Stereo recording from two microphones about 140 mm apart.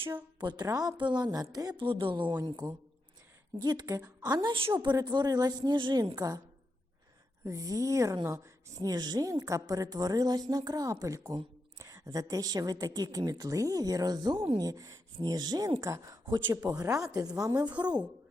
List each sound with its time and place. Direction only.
0.3 s a woman's voice: 30° right (ahead or behind)
3.6 s a woman's voice: 30° right (ahead or behind)
7.4 s a woman's voice: 25° right (ahead or behind)